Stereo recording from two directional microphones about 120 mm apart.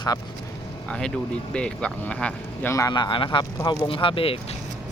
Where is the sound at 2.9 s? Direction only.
40° left (ahead or behind).